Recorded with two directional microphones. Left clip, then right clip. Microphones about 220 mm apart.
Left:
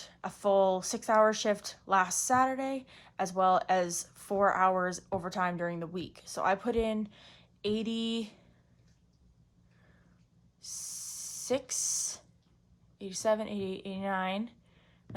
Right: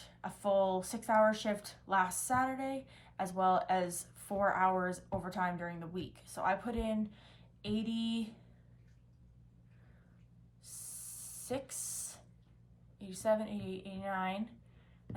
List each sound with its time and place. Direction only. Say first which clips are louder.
0.0 s speech: left 6 dB; 30° left (ahead or behind)
11.4 s speech: left 9 dB; 25° left (ahead or behind)